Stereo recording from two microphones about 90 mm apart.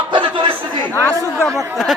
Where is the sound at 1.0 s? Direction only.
35° left (ahead or behind).